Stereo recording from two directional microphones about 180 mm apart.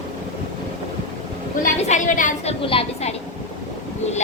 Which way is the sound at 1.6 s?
45° left (ahead or behind).